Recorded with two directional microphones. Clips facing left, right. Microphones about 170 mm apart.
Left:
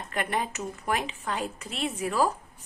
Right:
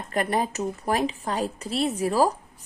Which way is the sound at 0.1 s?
35° right (ahead or behind).